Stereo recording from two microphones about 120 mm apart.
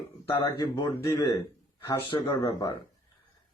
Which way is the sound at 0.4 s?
40° left (ahead or behind).